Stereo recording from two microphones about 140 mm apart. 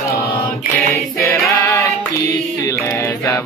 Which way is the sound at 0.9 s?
20° left (ahead or behind).